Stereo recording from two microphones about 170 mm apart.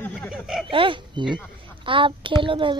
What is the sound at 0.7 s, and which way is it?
Speech, 30° right (ahead or behind).